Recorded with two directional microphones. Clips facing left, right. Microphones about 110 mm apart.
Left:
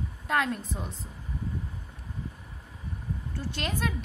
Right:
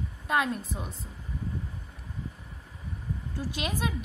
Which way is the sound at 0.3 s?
5° right (ahead or behind).